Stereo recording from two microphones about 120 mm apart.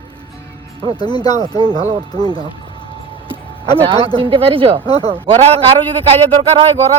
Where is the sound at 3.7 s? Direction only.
50° right (ahead or behind).